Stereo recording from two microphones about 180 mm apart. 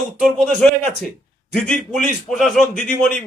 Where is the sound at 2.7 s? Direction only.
50° left (ahead or behind).